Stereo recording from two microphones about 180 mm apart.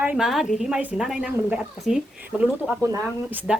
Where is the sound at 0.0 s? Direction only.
5° right (ahead or behind).